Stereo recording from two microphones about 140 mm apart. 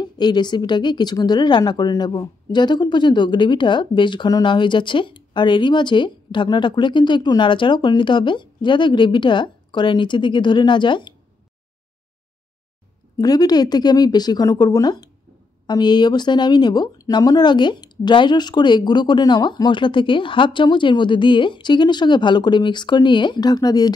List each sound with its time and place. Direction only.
0.0 s speech: 30° left (ahead or behind)
13.2 s speech: 30° left (ahead or behind)